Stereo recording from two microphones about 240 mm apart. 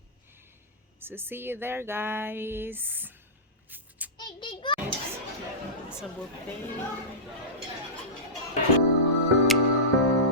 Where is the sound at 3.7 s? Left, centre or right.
Centre.